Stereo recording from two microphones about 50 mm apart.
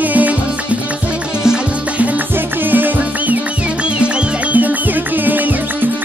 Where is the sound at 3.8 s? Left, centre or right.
Right.